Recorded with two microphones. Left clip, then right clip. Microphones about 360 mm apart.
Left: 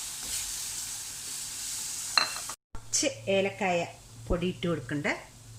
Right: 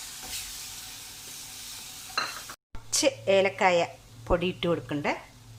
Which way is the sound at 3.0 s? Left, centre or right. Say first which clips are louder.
Right 5 dB; right.